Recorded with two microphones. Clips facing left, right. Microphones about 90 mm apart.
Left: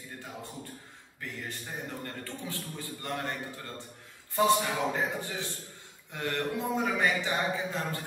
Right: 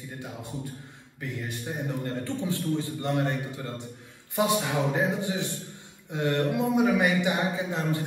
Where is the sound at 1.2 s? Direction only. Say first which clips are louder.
Right 6 dB; 15° right (ahead or behind).